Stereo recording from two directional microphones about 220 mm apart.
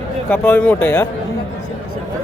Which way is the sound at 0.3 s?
10° left (ahead or behind).